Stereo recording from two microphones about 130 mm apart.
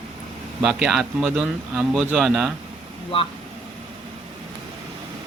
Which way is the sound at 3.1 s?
45° left (ahead or behind).